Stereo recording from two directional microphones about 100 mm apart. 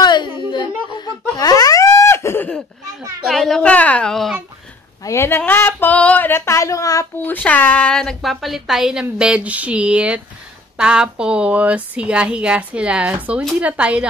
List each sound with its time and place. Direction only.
0.0 s whimper: 50° left (ahead or behind)
0.9 s laughter: 40° left (ahead or behind); by 2.5 s 25° left (ahead or behind)
3.3 s a woman's voice: centre (ahead or behind)
3.6 s a woman's voice: 15° left (ahead or behind)
5.0 s a sound: 25° left (ahead or behind)
7.2 s a woman's voice: 15° left (ahead or behind); by 14.0 s 10° right (ahead or behind)